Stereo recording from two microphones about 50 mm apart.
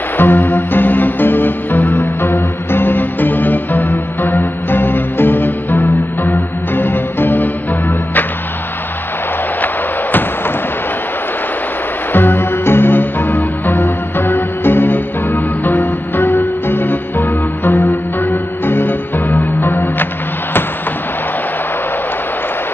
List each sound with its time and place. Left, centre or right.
0.2 s music: left
12.1 s music: left